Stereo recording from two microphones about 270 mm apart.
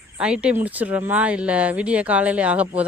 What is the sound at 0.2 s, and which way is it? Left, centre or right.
Speech, centre.